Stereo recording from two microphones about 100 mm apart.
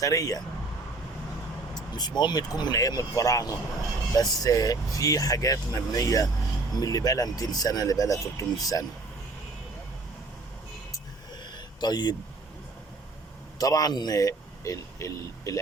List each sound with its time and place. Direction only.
0.0 s speech: 35° left (ahead or behind)
1.7 s speech: 45° left (ahead or behind)
11.5 s a sound: 45° left (ahead or behind)
13.6 s a man's voice: 40° left (ahead or behind)